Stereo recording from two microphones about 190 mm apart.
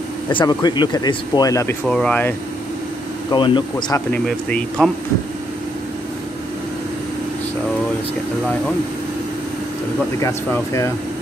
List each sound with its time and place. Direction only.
0.3 s speech: 25° left (ahead or behind)
1.9 s speech: 5° left (ahead or behind)
3.3 s speech: 25° left (ahead or behind)
4.1 s speech: 5° left (ahead or behind)
10.2 s speech: 15° left (ahead or behind)